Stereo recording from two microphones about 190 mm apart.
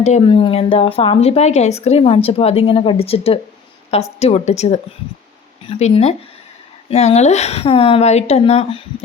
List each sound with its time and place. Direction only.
0.0 s speech: 35° left (ahead or behind)